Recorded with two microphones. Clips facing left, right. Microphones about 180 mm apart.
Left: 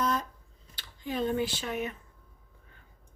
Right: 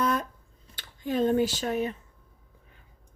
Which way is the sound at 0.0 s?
55° right (ahead or behind).